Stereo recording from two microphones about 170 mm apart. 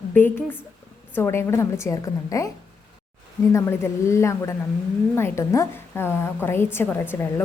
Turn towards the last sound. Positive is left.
turn(degrees=10)  # may be behind; listen again after turning